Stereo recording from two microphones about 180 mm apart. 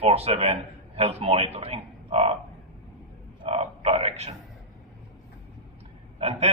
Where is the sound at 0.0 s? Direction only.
35° right (ahead or behind).